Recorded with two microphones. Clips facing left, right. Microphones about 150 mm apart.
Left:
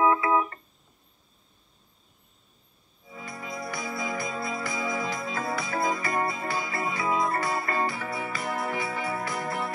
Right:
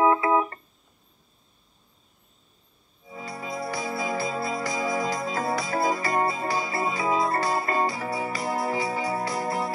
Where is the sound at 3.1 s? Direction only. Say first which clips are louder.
Right 4 dB; 30° right (ahead or behind).